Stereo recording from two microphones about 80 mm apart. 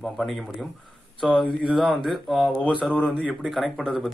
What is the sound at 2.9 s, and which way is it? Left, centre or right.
Speech, centre.